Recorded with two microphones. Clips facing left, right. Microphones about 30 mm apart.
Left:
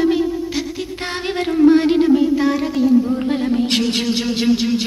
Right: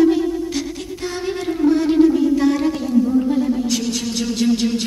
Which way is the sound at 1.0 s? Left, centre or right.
Left.